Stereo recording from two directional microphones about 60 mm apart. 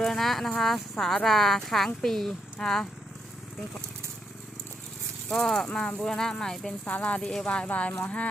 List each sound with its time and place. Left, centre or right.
0.0 s speech: centre
5.3 s speech: centre
6.8 s speech: left